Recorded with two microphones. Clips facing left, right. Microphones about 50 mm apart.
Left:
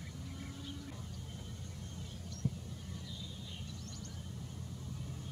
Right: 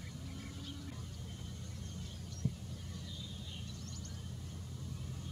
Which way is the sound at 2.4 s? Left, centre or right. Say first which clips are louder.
Left 1 dB; centre.